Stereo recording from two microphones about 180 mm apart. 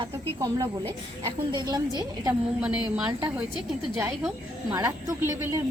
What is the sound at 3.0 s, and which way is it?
Speech, 5° right (ahead or behind).